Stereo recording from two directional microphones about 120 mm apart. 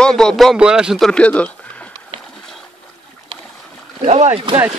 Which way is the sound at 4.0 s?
70° right (ahead or behind).